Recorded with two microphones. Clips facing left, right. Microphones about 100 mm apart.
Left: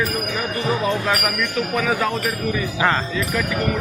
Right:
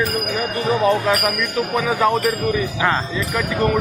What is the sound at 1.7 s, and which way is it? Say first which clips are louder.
Speech: even; 20° right (ahead or behind).